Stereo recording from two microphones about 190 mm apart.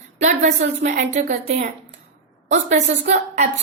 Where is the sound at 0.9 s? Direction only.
45° right (ahead or behind).